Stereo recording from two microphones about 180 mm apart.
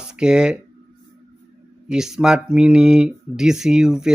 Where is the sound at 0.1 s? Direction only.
5° right (ahead or behind).